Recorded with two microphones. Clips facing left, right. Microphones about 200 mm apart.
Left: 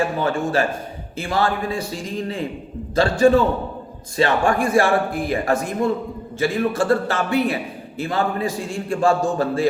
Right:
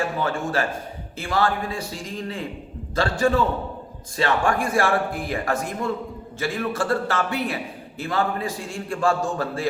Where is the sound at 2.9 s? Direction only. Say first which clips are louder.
Left 6 dB; 20° left (ahead or behind).